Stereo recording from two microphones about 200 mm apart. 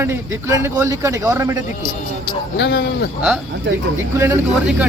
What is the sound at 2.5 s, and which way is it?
Speech, 60° left (ahead or behind).